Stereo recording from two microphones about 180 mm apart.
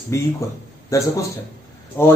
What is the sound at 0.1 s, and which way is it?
Speech, 15° left (ahead or behind).